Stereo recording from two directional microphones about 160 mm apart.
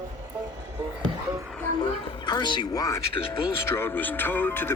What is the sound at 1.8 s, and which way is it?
Speech, 25° left (ahead or behind).